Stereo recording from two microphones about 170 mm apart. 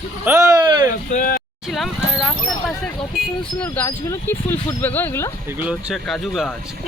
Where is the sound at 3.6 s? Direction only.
10° left (ahead or behind).